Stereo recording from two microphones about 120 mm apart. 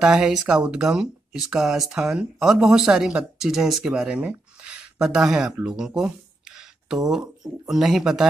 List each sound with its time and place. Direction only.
0.0 s speech: 5° right (ahead or behind)